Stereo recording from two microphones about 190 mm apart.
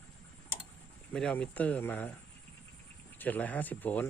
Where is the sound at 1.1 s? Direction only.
5° left (ahead or behind).